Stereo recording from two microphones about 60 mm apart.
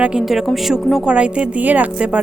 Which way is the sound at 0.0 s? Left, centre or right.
Centre.